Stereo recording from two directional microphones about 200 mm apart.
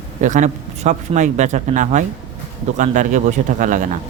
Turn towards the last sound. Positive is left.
turn(degrees=-40)  # may be behind; listen again after turning